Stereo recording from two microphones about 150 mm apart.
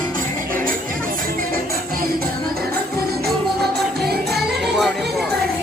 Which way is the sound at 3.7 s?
90° right.